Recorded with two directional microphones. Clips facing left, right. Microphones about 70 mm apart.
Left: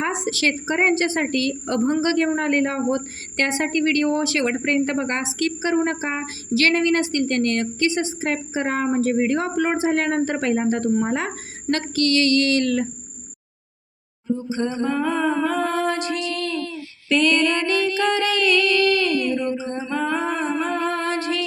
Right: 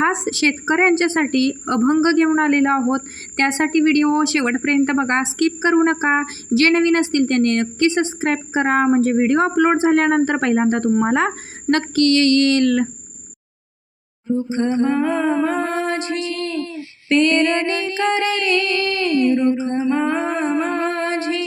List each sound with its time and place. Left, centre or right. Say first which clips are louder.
0.0 s a woman's voice: right 4 dB; right
14.3 s humming: right 7 dB; right